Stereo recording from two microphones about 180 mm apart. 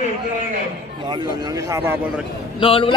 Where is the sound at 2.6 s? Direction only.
30° left (ahead or behind).